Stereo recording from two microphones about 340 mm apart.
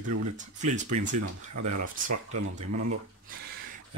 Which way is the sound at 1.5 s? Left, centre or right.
Right.